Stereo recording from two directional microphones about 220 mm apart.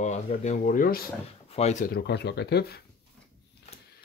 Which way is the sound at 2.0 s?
50° left (ahead or behind).